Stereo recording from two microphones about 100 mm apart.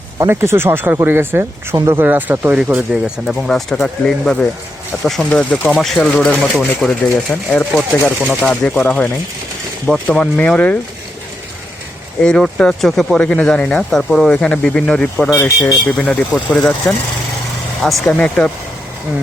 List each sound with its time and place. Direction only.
0.3 s speech: 25° right (ahead or behind)
1.7 s speech: 35° right (ahead or behind)
2.0 s speech: 20° right (ahead or behind)
2.9 s speech: centre (ahead or behind)
12.2 s speech: 10° left (ahead or behind)
18.1 s speech: 10° left (ahead or behind)